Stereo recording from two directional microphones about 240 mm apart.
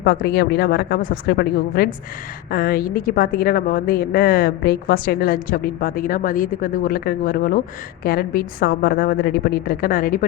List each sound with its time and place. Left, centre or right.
0.0 s a woman's voice: left